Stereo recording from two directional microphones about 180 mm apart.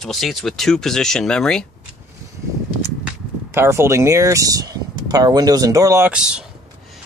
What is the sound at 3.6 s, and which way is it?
Speech, 15° right (ahead or behind).